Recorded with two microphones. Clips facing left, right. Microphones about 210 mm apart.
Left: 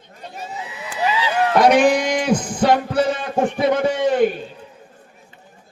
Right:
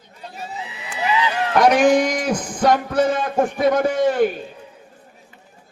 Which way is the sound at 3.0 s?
50° right (ahead or behind).